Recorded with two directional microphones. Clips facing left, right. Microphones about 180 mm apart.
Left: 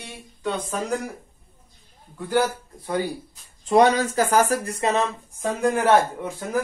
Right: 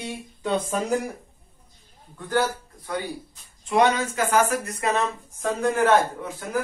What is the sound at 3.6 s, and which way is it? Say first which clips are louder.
Speech: left 3 dB; 35° left (ahead or behind).